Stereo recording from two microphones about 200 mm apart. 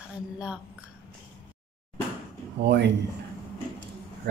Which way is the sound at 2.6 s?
60° right (ahead or behind).